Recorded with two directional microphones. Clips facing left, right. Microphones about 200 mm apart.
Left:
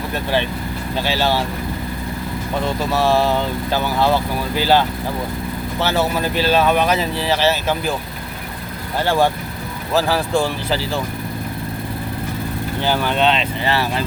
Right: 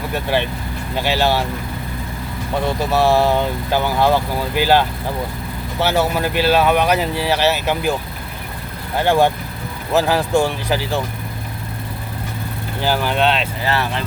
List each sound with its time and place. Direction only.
0.1 s speech: 15° right (ahead or behind)
2.9 s speech: 15° right (ahead or behind)
9.0 s speech: 15° right (ahead or behind)
12.8 s speech: 10° right (ahead or behind)